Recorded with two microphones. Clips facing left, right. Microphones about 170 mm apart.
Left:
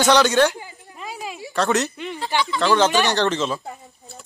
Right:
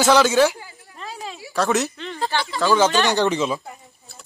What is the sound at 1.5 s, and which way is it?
Speech, centre (ahead or behind).